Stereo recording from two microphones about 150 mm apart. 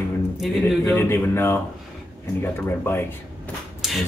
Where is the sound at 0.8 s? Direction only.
15° left (ahead or behind).